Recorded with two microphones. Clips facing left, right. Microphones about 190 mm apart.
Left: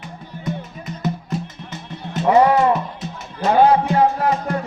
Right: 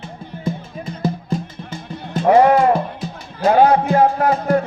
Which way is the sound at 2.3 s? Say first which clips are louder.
Right 2 dB; 50° right (ahead or behind).